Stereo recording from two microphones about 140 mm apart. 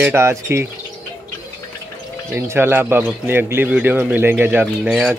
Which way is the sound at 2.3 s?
15° right (ahead or behind).